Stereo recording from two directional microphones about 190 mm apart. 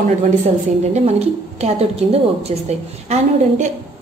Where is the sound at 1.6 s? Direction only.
30° right (ahead or behind).